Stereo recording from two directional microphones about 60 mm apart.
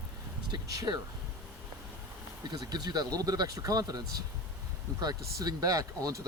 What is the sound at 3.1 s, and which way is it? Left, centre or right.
Speech, right.